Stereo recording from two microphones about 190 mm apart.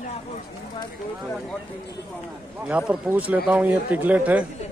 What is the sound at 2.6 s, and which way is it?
Speech, 5° right (ahead or behind).